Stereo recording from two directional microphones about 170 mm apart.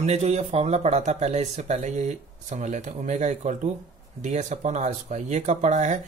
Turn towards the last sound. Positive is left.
turn(degrees=-45)  # may be behind; listen again after turning